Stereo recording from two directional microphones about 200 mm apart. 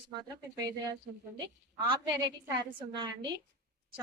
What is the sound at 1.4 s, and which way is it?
A woman's voice, 25° right (ahead or behind).